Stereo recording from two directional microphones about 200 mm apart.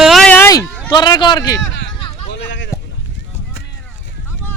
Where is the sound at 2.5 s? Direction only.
65° left (ahead or behind).